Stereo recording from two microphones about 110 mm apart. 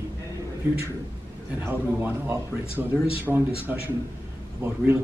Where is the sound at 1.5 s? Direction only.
20° right (ahead or behind).